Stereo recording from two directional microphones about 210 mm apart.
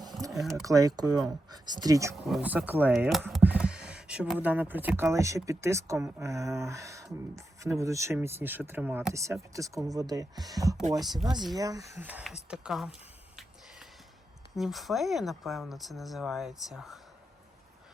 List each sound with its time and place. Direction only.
0.3 s speech: centre (ahead or behind)
0.6 s speech: 15° right (ahead or behind)
2.2 s speech: 5° right (ahead or behind)
14.5 s speech: centre (ahead or behind)